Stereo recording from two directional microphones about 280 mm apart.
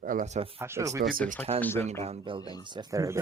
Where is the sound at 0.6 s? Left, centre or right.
Centre.